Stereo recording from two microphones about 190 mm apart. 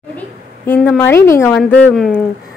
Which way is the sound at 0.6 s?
10° left (ahead or behind).